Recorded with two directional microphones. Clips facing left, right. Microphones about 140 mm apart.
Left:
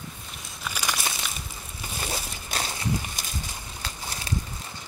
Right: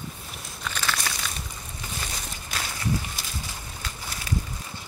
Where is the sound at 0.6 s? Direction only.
10° left (ahead or behind).